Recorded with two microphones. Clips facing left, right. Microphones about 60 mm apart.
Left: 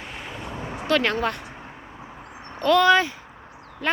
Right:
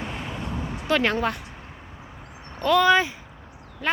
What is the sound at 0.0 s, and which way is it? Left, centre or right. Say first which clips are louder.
Vehicle: right 3 dB; centre.